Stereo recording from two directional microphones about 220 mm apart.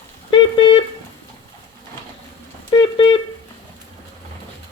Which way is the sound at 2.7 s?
20° left (ahead or behind).